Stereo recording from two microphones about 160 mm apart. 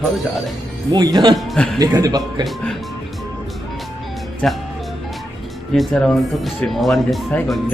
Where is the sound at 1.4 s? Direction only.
Centre (ahead or behind).